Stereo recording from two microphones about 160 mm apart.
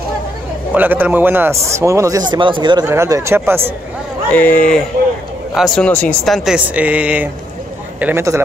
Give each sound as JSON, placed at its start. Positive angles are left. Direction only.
{"t": 0.7, "sound": "speech", "side_deg": -10}
{"t": 2.9, "sound": "speech", "side_deg": -15}
{"t": 4.3, "sound": "speech", "side_deg": 10}
{"t": 5.9, "sound": "speech", "side_deg": 10}